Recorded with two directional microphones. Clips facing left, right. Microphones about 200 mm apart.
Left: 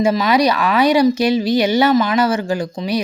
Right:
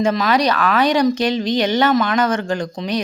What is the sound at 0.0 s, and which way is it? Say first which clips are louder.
A woman's voice: left 2 dB; 5° left (ahead or behind).